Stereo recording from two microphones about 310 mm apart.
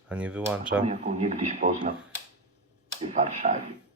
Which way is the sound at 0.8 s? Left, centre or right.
Right.